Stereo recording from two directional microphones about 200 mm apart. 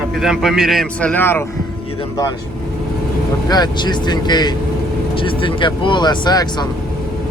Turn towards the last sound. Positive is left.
turn(degrees=20)  # may be behind; listen again after turning